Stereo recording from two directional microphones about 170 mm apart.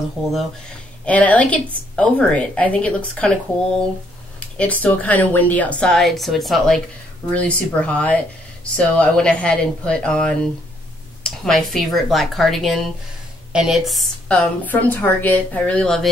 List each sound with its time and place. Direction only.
1.0 s a woman's voice: 10° left (ahead or behind)
4.4 s a woman's voice: 10° left (ahead or behind)